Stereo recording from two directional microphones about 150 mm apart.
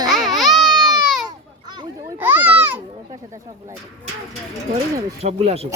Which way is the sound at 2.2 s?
10° right (ahead or behind).